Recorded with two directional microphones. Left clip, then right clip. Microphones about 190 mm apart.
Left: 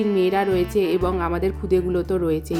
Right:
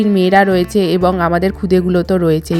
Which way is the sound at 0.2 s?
40° right (ahead or behind).